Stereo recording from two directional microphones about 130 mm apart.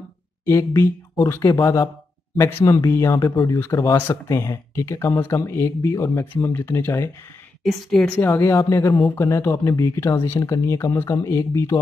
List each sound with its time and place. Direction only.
0.5 s speech: 20° left (ahead or behind)
7.6 s a woman's voice: 5° left (ahead or behind)
8.2 s speech: 20° left (ahead or behind)